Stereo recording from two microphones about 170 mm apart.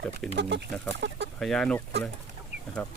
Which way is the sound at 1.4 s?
5° left (ahead or behind).